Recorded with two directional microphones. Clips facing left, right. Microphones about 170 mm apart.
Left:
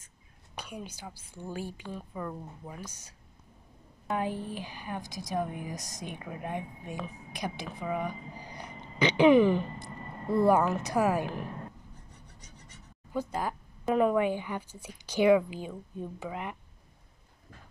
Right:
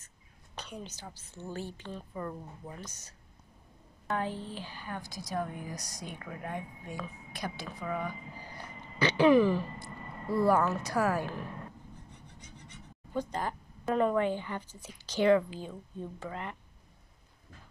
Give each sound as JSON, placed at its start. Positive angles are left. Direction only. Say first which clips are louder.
{"t": 0.6, "sound": "speech", "louder": "left 2 dB", "side_deg": 10}
{"t": 12.4, "sound": "a sound", "louder": "right 4 dB", "side_deg": 40}
{"t": 13.1, "sound": "speech", "louder": "left 1 dB", "side_deg": 5}